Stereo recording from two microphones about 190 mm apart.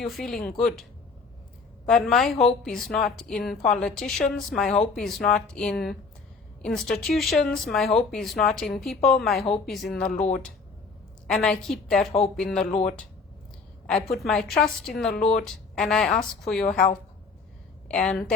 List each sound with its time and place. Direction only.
0.0 s speech: centre (ahead or behind)
1.9 s speech: 5° left (ahead or behind)
10.1 s speech: 40° left (ahead or behind)
11.3 s speech: centre (ahead or behind)
13.8 s a woman's voice: centre (ahead or behind)
17.8 s speech: 5° left (ahead or behind)